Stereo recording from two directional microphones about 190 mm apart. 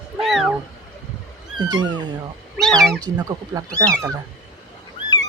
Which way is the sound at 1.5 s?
20° right (ahead or behind).